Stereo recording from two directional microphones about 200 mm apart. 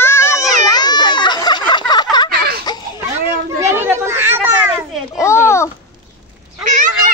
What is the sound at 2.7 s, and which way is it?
Baby cry, 20° left (ahead or behind).